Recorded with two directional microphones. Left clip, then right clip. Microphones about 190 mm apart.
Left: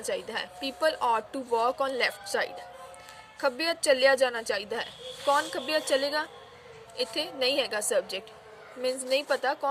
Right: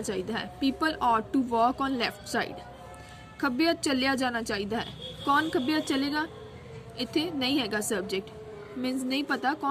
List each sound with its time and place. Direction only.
0.0 s a woman's voice: 20° left (ahead or behind)